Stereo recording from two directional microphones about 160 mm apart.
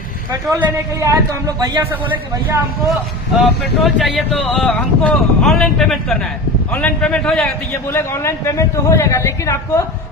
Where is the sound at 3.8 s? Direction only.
Centre (ahead or behind).